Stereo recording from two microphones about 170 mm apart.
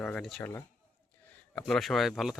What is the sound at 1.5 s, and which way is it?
Speech, 5° left (ahead or behind).